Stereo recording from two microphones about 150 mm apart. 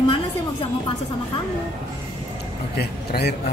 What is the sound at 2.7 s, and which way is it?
Speech, 90° left.